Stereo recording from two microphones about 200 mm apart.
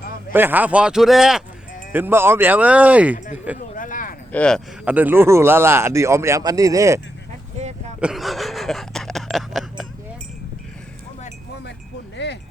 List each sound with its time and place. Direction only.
0.3 s speech: 10° right (ahead or behind)
3.8 s a sound: 40° left (ahead or behind)
4.3 s speech: 5° left (ahead or behind)
4.9 s speech: 10° right (ahead or behind)
8.0 s a sound: centre (ahead or behind)
12.1 s wind chime: 60° left (ahead or behind)